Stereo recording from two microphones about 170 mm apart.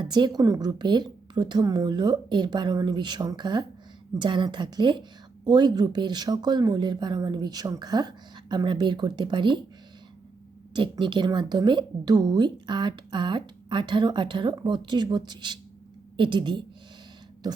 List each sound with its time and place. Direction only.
0.0 s speech: 25° right (ahead or behind)
10.8 s speech: 30° right (ahead or behind)